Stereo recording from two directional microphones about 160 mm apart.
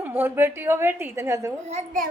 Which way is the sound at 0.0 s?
10° right (ahead or behind).